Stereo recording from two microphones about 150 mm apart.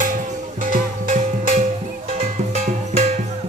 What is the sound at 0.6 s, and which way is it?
Music, 65° right (ahead or behind).